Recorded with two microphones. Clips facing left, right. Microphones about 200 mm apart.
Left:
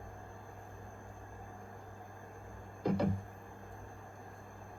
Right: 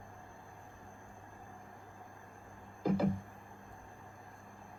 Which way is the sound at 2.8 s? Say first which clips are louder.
Right 1 dB; 5° right (ahead or behind).